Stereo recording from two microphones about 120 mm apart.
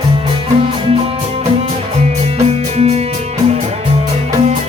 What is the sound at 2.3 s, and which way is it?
Music, 65° right (ahead or behind).